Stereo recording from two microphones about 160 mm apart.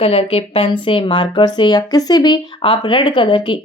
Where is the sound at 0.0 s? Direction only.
35° left (ahead or behind).